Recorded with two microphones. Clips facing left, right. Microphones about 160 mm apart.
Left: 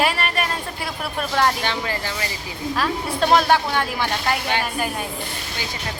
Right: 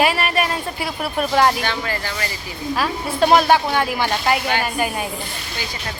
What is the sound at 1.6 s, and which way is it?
Speech, 20° left (ahead or behind).